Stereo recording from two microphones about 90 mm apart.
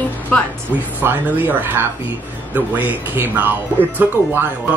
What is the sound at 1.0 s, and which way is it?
Speech, 20° right (ahead or behind).